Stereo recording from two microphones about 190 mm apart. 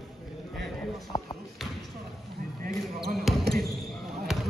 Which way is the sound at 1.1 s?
20° left (ahead or behind).